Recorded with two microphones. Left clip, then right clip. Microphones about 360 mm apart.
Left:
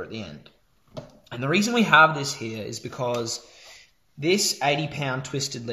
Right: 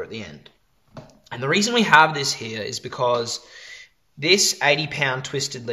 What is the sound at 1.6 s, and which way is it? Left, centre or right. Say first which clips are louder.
Speech: right 2 dB; right.